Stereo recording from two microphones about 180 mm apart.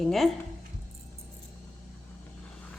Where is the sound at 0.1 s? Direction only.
Centre (ahead or behind).